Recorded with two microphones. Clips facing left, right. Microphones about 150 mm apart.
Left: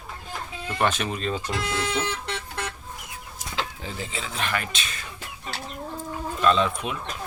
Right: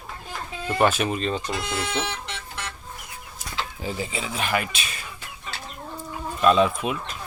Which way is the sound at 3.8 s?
10° right (ahead or behind).